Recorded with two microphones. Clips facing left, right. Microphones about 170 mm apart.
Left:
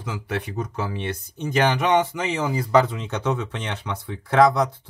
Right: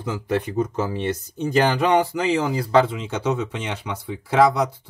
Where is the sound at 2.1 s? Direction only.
30° right (ahead or behind).